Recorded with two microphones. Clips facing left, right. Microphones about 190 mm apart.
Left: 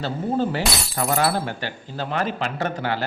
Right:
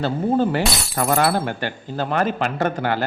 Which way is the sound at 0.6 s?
Centre (ahead or behind).